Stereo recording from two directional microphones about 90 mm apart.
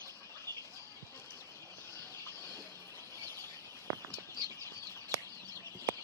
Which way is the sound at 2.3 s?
30° left (ahead or behind).